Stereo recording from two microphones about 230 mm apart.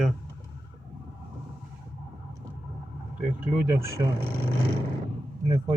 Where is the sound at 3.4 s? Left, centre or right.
Centre.